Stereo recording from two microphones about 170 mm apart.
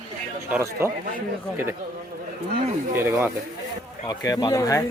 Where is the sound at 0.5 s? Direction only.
15° right (ahead or behind).